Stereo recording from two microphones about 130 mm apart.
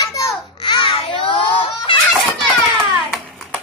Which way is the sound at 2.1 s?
Centre (ahead or behind).